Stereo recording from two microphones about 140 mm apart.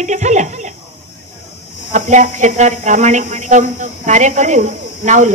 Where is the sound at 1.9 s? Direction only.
60° right (ahead or behind).